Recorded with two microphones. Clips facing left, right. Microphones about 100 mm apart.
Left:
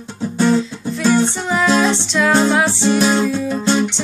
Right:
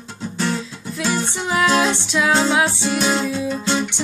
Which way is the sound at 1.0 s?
5° right (ahead or behind).